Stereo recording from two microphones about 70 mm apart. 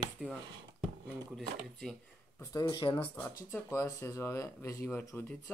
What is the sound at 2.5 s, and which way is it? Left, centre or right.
Speech, left.